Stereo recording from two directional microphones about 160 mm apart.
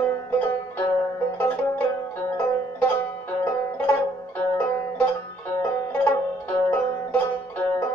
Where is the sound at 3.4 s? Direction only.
10° left (ahead or behind).